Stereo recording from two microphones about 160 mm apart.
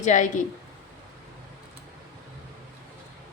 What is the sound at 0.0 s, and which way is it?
Speech, 50° left (ahead or behind).